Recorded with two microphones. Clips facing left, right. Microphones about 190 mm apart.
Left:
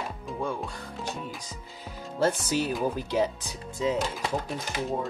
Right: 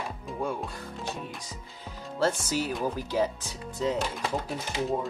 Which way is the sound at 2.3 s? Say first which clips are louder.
Left 2 dB; 20° left (ahead or behind).